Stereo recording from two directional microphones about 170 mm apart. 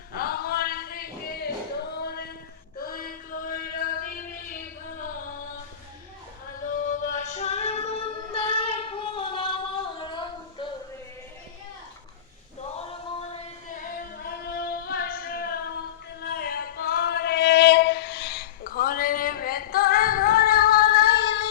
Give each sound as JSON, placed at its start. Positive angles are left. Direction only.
{"t": 0.2, "sound": "a sound", "side_deg": 65}
{"t": 1.9, "sound": "singing", "side_deg": 70}
{"t": 2.7, "sound": "chant", "side_deg": 60}
{"t": 6.6, "sound": "female singing", "side_deg": 50}
{"t": 10.0, "sound": "a sound", "side_deg": 30}
{"t": 14.2, "sound": "singing", "side_deg": 65}
{"t": 16.2, "sound": "female singing", "side_deg": 70}